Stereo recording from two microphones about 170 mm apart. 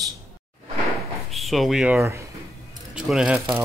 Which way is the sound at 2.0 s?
15° right (ahead or behind).